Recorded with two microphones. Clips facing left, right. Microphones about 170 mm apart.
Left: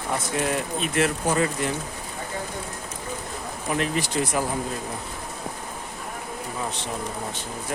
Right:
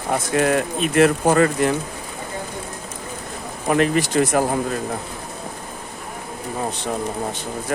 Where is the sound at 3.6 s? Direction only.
65° right (ahead or behind).